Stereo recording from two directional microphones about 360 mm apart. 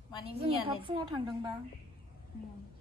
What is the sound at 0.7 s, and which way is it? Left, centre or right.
Speech, centre.